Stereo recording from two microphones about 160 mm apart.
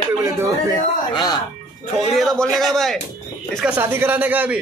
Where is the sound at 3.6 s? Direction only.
10° right (ahead or behind).